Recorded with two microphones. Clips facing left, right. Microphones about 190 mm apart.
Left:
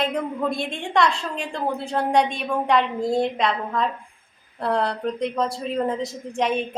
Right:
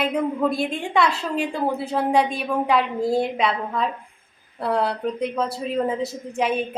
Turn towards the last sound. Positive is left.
turn(degrees=-5)  # may be behind; listen again after turning